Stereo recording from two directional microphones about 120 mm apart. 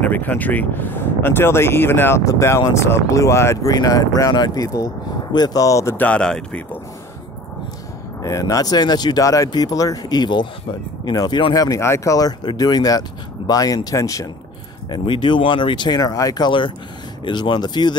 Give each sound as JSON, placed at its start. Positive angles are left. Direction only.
{"t": 0.0, "sound": "speech", "side_deg": 15}
{"t": 5.9, "sound": "speech", "side_deg": 10}
{"t": 8.2, "sound": "speech", "side_deg": 30}
{"t": 14.9, "sound": "speech", "side_deg": 40}